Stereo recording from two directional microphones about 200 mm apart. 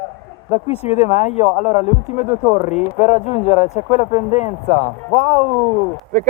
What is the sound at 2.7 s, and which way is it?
Speech, 35° left (ahead or behind).